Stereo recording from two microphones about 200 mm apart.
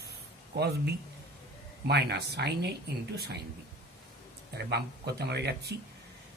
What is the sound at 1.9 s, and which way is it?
Speech, 55° right (ahead or behind).